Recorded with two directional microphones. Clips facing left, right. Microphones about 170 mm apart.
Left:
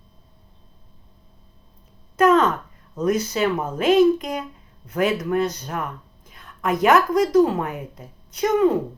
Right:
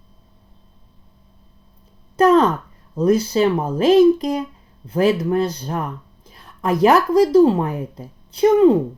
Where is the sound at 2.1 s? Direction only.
35° right (ahead or behind).